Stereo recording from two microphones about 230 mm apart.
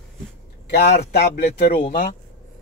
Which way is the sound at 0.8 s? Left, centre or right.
Left.